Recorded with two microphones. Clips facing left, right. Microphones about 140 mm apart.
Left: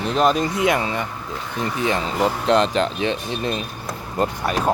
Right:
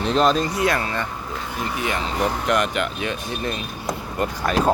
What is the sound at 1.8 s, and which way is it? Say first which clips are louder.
Speech: left 3 dB; 30° left (ahead or behind).